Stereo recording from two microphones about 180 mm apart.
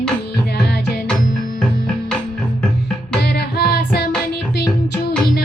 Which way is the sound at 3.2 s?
65° left (ahead or behind).